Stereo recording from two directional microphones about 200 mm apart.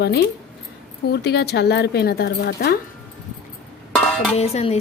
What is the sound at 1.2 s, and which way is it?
Speech, 55° left (ahead or behind).